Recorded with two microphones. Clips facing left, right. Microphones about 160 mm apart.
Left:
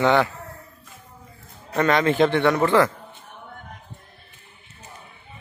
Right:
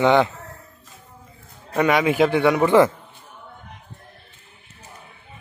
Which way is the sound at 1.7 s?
10° right (ahead or behind).